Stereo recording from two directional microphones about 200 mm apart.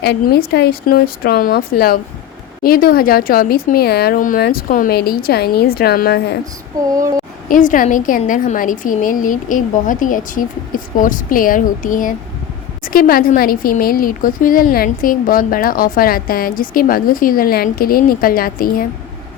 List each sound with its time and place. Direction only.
0.0 s speech: 55° left (ahead or behind)
7.4 s a woman's voice: 40° left (ahead or behind)